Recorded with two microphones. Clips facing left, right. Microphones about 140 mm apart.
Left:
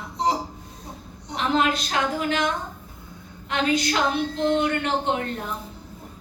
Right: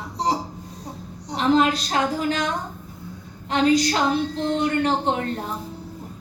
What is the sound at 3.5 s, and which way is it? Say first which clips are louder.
A woman's voice: right 4 dB; 35° right (ahead or behind).